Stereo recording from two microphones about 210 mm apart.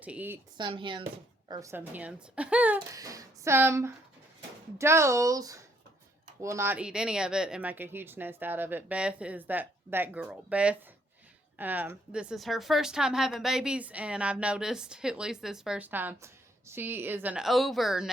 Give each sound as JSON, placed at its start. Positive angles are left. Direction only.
{"t": 0.0, "sound": "speech", "side_deg": -5}
{"t": 0.5, "sound": "speech", "side_deg": -20}